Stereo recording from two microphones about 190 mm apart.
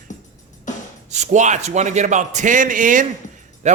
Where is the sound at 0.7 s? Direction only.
40° left (ahead or behind).